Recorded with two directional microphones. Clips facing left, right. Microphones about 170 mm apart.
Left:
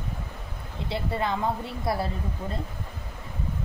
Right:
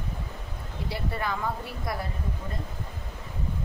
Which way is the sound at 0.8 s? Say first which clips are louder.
Left 3 dB; 25° left (ahead or behind).